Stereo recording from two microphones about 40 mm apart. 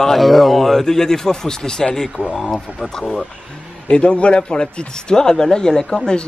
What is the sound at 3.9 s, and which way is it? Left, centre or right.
Speech, left.